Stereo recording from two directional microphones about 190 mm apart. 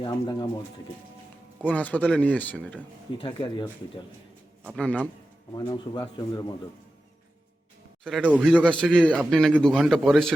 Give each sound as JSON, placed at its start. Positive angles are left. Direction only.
{"t": 0.0, "sound": "speech", "side_deg": 20}
{"t": 1.6, "sound": "speech", "side_deg": 10}
{"t": 3.2, "sound": "speech", "side_deg": 20}
{"t": 4.7, "sound": "speech", "side_deg": 5}
{"t": 5.5, "sound": "speech", "side_deg": 20}
{"t": 8.0, "sound": "a man's voice", "side_deg": -5}
{"t": 8.6, "sound": "a man's voice", "side_deg": 5}